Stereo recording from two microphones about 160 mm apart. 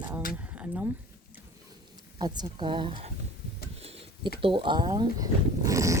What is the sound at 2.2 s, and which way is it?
Speech, 25° right (ahead or behind).